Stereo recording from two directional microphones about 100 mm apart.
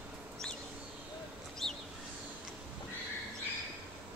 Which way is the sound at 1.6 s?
5° left (ahead or behind).